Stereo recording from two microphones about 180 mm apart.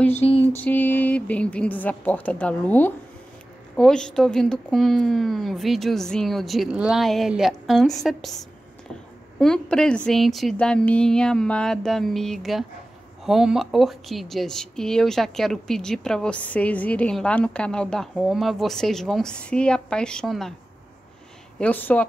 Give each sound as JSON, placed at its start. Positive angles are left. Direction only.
{"t": 0.1, "sound": "a sound", "side_deg": 35}
{"t": 0.4, "sound": "speech", "side_deg": 10}
{"t": 9.4, "sound": "speech", "side_deg": 5}
{"t": 21.5, "sound": "speech", "side_deg": 10}